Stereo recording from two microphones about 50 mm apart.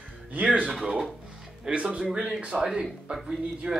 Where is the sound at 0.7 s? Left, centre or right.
Centre.